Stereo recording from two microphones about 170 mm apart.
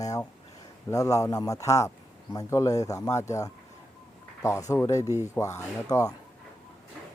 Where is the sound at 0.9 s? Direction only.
20° left (ahead or behind).